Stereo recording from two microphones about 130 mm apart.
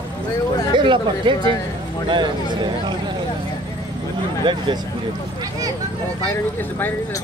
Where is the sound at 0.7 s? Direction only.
40° right (ahead or behind).